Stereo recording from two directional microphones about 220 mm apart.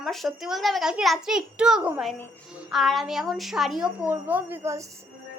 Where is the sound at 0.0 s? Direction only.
Centre (ahead or behind).